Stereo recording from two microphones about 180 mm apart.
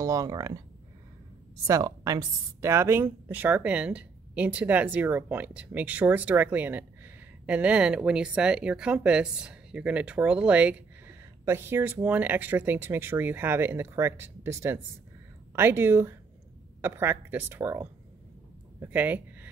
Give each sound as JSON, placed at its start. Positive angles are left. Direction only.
{"t": 0.0, "sound": "speech", "side_deg": -20}
{"t": 1.7, "sound": "speech", "side_deg": -20}